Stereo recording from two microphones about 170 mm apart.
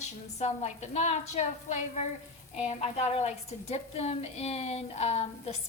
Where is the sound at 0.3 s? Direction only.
40° left (ahead or behind).